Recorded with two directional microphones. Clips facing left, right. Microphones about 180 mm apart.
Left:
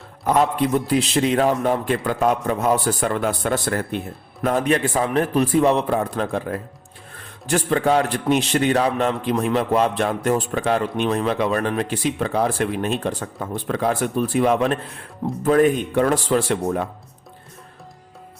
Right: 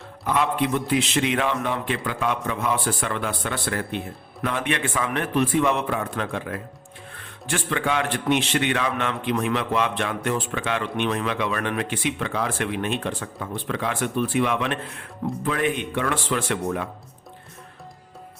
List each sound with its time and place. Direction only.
0.3 s a man's voice: 40° left (ahead or behind)